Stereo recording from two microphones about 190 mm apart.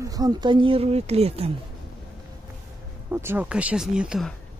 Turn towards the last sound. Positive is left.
turn(degrees=-5)  # may be behind; listen again after turning